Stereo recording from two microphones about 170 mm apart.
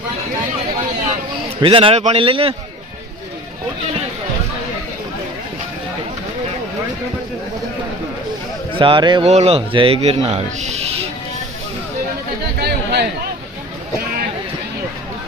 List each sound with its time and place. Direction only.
1.6 s speech: 30° right (ahead or behind)
8.8 s speech: 30° right (ahead or behind)
9.2 s speech: 40° right (ahead or behind)
12.6 s chatter: 75° right (ahead or behind)